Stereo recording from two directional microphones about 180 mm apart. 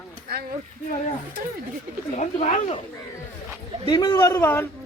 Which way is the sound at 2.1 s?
40° left (ahead or behind).